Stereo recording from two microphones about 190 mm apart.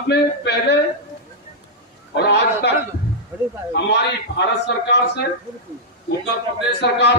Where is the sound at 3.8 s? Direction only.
60° left (ahead or behind).